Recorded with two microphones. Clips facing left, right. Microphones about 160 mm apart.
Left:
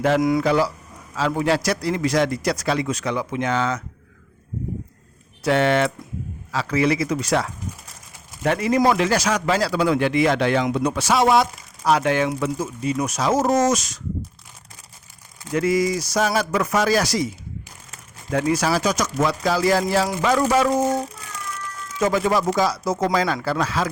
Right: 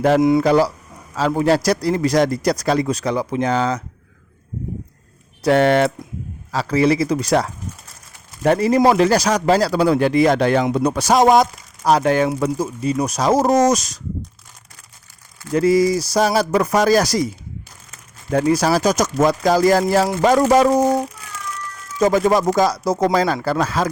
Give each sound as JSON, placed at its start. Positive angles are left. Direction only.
{"t": 0.2, "sound": "speech", "side_deg": -25}
{"t": 0.4, "sound": "speech", "side_deg": -40}
{"t": 5.4, "sound": "speech", "side_deg": -40}
{"t": 15.5, "sound": "speech", "side_deg": -35}
{"t": 18.3, "sound": "speech", "side_deg": -35}
{"t": 22.0, "sound": "speech", "side_deg": -40}